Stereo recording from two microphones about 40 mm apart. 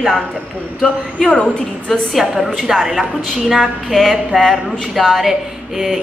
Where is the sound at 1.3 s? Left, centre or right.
Left.